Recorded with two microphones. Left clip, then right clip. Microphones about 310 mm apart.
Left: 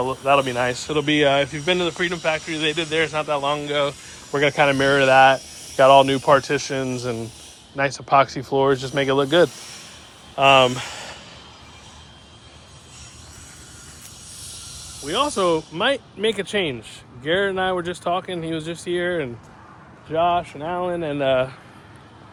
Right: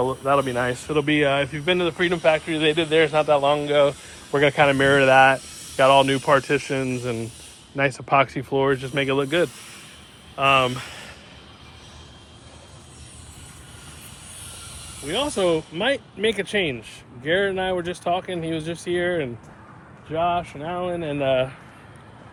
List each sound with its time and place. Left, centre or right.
0.0 s speech: centre
10.3 s speech: centre
15.0 s speech: centre